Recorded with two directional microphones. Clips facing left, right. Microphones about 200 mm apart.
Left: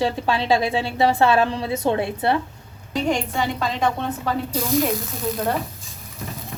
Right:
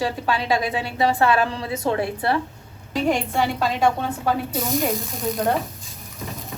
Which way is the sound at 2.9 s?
5° right (ahead or behind).